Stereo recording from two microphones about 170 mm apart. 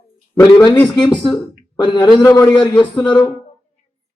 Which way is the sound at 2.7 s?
25° left (ahead or behind).